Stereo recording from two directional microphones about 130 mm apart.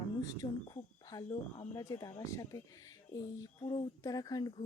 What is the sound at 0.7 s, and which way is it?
Speech, 30° left (ahead or behind).